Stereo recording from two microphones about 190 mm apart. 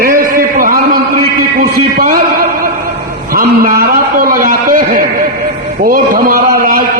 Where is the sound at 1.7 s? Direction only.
50° right (ahead or behind).